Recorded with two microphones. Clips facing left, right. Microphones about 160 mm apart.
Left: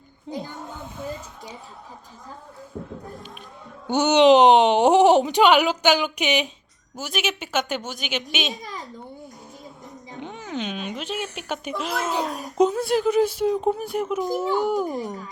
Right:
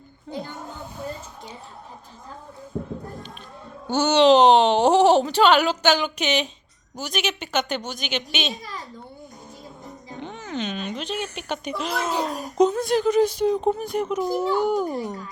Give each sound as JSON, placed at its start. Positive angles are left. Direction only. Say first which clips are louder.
{"t": 0.3, "sound": "a child's voice", "louder": "left 1 dB", "side_deg": 20}
{"t": 3.8, "sound": "speech", "louder": "left 1 dB", "side_deg": 20}
{"t": 8.6, "sound": "a sound", "louder": "left 1 dB", "side_deg": 20}
{"t": 10.2, "sound": "speech", "louder": "even", "side_deg": 5}